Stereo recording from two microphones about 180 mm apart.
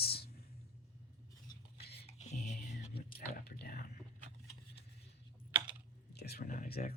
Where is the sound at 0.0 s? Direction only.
60° left (ahead or behind).